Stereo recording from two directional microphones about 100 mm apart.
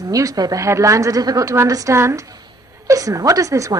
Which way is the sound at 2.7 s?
30° right (ahead or behind).